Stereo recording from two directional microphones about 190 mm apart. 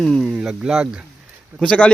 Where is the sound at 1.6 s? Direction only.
5° left (ahead or behind).